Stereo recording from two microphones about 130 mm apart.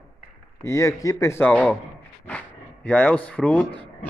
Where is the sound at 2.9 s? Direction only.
10° left (ahead or behind).